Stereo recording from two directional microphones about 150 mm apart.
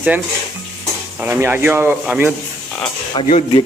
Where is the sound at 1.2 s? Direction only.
15° right (ahead or behind).